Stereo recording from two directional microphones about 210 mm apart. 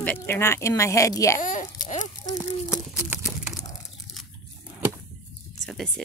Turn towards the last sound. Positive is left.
turn(degrees=0)  # may be behind; listen again after turning